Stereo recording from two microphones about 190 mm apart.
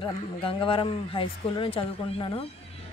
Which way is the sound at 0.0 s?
25° left (ahead or behind).